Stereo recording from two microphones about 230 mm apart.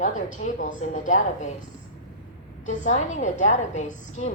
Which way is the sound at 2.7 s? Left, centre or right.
Left.